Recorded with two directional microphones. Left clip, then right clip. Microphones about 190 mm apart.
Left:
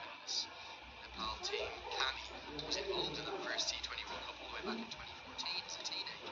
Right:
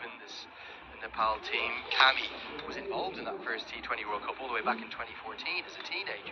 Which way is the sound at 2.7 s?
20° right (ahead or behind).